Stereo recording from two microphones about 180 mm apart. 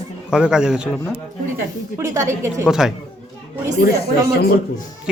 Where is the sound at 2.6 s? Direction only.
5° right (ahead or behind).